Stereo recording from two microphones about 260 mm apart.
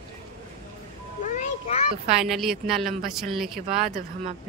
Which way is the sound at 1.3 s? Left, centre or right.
Left.